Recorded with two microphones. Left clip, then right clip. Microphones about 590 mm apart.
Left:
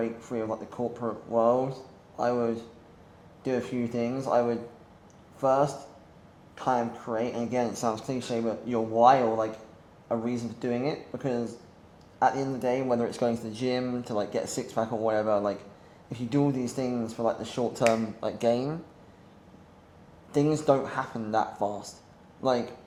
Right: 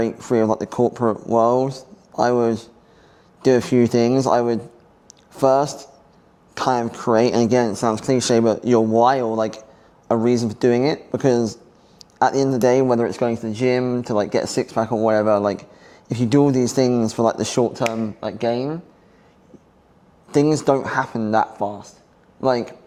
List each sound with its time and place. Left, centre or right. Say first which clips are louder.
0.0 s speech: right 12 dB; right
7.7 s speech: right 10 dB; right
13.1 s speech: right 7 dB; right
17.7 s speech: right 2 dB; right
20.3 s a man's voice: right 7 dB; right